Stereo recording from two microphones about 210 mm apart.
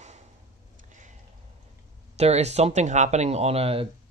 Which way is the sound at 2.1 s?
30° right (ahead or behind).